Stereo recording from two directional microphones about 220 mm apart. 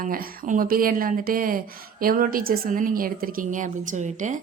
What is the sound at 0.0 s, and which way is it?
A woman's voice, 40° right (ahead or behind).